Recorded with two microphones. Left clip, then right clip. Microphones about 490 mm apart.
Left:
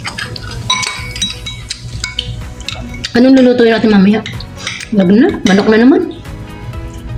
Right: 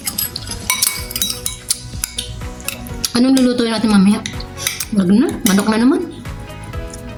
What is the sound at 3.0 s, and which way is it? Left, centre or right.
Cutlery, right.